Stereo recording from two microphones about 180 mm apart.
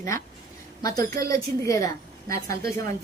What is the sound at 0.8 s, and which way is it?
A woman's voice, 20° left (ahead or behind).